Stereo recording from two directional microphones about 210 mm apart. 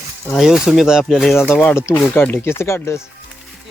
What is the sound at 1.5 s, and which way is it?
Speech, 10° left (ahead or behind).